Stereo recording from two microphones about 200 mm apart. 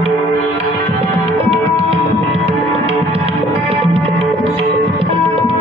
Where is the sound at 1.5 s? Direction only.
30° right (ahead or behind).